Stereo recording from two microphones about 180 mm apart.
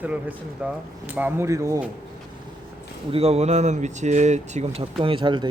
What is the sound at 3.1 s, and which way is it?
Speech, 35° right (ahead or behind).